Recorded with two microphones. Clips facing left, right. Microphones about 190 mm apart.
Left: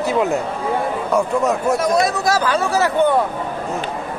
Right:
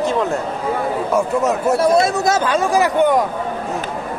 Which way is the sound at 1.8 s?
25° right (ahead or behind).